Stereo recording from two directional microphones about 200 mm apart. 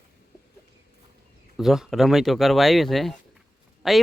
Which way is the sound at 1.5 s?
Centre (ahead or behind).